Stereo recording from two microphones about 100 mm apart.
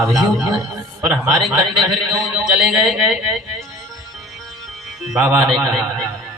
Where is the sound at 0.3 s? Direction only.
30° right (ahead or behind).